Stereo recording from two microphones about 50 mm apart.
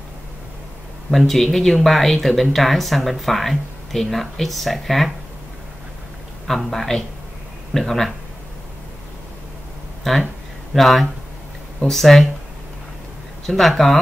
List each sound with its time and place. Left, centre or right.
1.1 s speech: centre
6.4 s a man's voice: centre
10.1 s speech: centre
13.6 s speech: centre